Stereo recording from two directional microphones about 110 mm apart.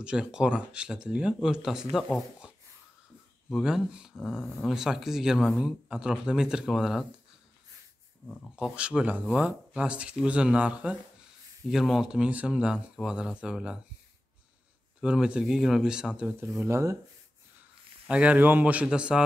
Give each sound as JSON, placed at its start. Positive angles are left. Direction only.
{"t": 0.0, "sound": "speech", "side_deg": -10}
{"t": 3.4, "sound": "speech", "side_deg": 0}
{"t": 8.3, "sound": "speech", "side_deg": 10}
{"t": 8.5, "sound": "speech", "side_deg": -10}
{"t": 15.0, "sound": "speech", "side_deg": -5}
{"t": 16.3, "sound": "speech", "side_deg": -25}
{"t": 18.0, "sound": "speech", "side_deg": -10}